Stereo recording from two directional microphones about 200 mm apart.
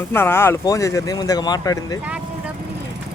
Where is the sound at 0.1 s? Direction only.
10° left (ahead or behind).